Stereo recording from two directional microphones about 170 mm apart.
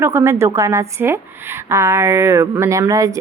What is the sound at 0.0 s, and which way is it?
A woman's voice, 15° right (ahead or behind).